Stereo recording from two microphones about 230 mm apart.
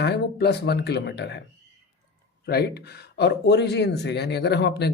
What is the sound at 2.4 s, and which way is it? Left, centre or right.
A man's voice, left.